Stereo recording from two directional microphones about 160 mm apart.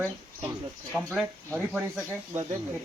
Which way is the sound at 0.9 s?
Centre (ahead or behind).